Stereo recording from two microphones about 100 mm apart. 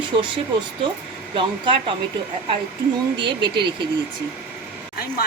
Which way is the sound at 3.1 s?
55° right (ahead or behind).